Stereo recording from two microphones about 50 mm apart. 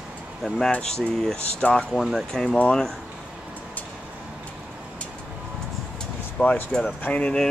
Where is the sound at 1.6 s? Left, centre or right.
Centre.